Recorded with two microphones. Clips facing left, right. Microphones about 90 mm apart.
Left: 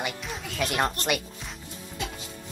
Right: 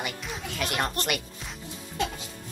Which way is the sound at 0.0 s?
Centre (ahead or behind).